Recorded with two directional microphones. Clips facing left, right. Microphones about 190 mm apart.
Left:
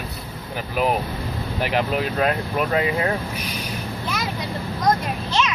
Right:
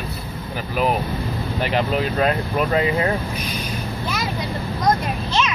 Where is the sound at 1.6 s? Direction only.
10° left (ahead or behind).